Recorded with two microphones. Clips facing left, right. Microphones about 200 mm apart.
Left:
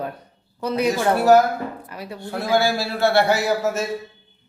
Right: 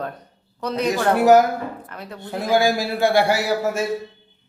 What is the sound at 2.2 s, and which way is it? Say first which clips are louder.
A man's voice: right 1 dB; 15° right (ahead or behind).